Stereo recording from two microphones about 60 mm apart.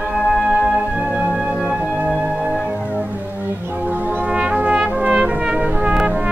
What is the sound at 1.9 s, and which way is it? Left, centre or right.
Music, centre.